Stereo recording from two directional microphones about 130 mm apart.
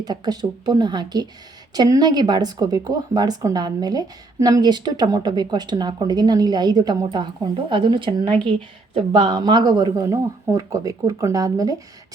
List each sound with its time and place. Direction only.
0.0 s speech: 30° right (ahead or behind)